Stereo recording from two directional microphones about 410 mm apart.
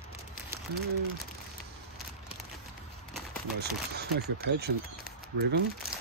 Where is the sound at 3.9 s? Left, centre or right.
Right.